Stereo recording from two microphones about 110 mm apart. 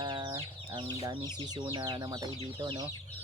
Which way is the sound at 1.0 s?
35° right (ahead or behind).